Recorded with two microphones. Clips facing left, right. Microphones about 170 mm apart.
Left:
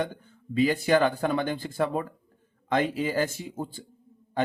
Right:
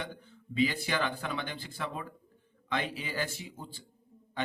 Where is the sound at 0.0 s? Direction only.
45° left (ahead or behind).